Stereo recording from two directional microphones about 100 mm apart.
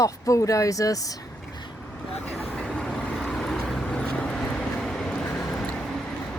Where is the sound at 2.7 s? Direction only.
5° left (ahead or behind).